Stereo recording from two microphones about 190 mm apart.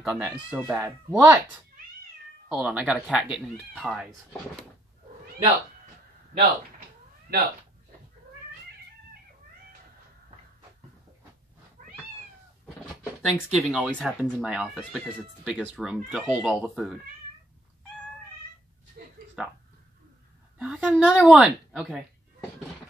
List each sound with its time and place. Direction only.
0.0 s speech: 5° right (ahead or behind)
2.5 s speech: 5° right (ahead or behind)
7.3 s speech: 55° right (ahead or behind)
11.8 s cat: 40° right (ahead or behind)
13.3 s speech: 5° right (ahead or behind)
19.0 s a sound: 60° right (ahead or behind)
19.4 s speech: 5° right (ahead or behind)